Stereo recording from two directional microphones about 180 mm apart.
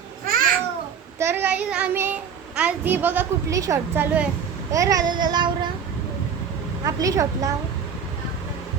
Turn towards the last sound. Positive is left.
turn(degrees=-20)  # may be behind; listen again after turning